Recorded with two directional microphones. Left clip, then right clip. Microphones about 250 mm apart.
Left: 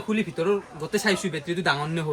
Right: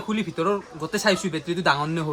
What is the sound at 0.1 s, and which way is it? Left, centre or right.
Speech, right.